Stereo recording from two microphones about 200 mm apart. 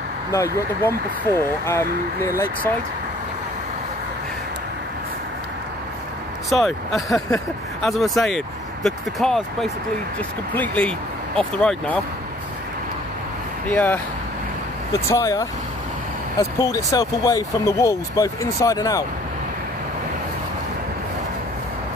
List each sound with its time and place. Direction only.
0.3 s speech: 15° left (ahead or behind)
6.5 s speech: centre (ahead or behind)
13.7 s speech: 10° left (ahead or behind)